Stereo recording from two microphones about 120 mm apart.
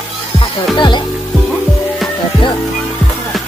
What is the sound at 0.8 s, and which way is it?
Music, 40° left (ahead or behind).